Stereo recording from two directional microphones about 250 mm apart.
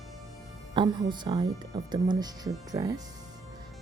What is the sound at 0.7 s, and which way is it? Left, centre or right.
Speech, centre.